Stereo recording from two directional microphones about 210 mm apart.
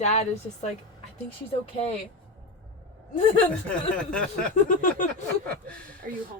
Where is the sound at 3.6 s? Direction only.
5° left (ahead or behind).